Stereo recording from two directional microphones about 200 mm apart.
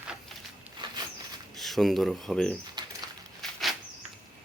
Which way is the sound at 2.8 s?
20° right (ahead or behind).